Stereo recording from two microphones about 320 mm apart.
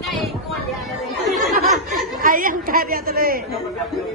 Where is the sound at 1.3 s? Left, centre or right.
Centre.